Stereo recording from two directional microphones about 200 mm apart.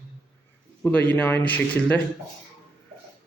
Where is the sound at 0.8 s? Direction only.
5° left (ahead or behind).